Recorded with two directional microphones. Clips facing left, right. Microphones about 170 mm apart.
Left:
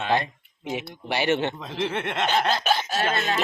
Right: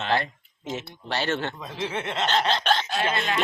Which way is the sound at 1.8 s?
60° left (ahead or behind).